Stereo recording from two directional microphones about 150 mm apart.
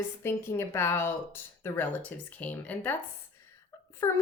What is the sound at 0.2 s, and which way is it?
A woman's voice, 15° left (ahead or behind).